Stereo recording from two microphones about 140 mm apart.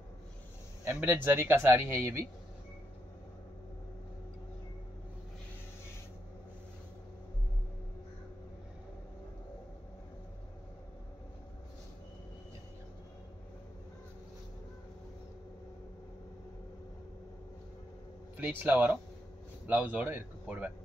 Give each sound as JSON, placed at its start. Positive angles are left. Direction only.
{"t": 0.8, "sound": "speech", "side_deg": -15}
{"t": 18.3, "sound": "speech", "side_deg": -15}